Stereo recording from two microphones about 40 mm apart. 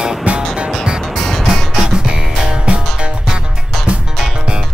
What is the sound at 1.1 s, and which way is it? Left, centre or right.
Music, centre.